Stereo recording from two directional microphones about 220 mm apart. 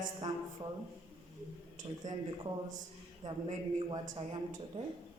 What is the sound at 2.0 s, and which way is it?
A man's voice, 20° right (ahead or behind).